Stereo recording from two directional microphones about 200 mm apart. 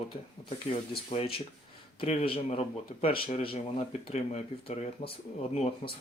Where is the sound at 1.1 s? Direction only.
30° left (ahead or behind).